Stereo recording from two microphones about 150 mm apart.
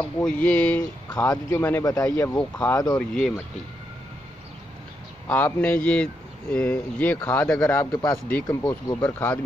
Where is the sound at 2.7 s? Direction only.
25° left (ahead or behind).